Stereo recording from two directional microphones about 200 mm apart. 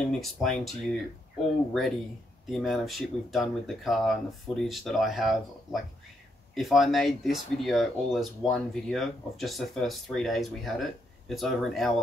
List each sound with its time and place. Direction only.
0.1 s speech: centre (ahead or behind)